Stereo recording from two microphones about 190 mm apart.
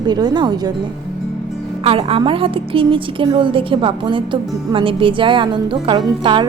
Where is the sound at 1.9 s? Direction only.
30° right (ahead or behind).